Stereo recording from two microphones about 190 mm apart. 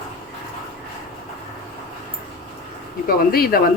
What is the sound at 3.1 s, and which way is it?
Speech, 50° left (ahead or behind).